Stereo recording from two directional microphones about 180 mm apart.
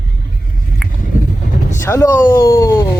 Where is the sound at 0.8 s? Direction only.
5° left (ahead or behind).